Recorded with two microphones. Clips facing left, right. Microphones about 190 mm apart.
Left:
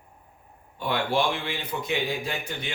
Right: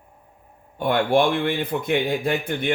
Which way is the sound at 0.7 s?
50° right (ahead or behind).